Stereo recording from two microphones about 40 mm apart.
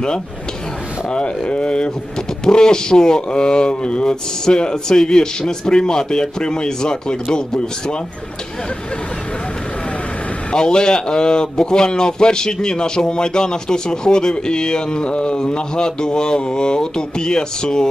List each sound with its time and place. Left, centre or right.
1.1 s a man's voice: left
10.5 s a man's voice: centre